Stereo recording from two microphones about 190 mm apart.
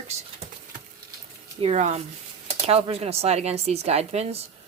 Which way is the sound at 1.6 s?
35° right (ahead or behind).